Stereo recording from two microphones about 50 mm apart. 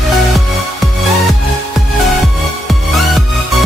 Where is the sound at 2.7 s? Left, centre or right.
Centre.